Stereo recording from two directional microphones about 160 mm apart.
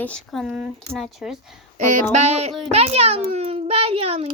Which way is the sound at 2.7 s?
40° right (ahead or behind).